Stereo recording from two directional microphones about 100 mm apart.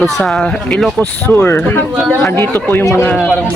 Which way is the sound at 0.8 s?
10° left (ahead or behind).